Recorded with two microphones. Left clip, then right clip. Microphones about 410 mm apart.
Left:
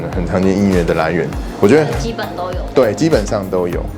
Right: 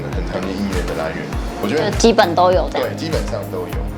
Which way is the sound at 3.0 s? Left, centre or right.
Left.